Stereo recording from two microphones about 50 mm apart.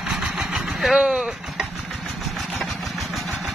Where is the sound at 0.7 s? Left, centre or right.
Centre.